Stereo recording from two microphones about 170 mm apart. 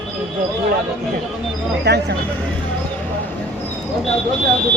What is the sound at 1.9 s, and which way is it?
Speech, 80° right.